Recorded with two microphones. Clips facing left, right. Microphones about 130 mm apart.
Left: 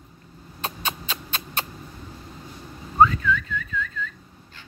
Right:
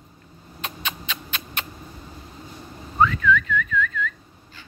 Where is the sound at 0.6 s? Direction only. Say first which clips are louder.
Left 2 dB; 35° left (ahead or behind).